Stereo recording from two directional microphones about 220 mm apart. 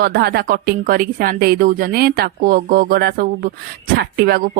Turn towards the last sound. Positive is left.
turn(degrees=-45)  # may be behind; listen again after turning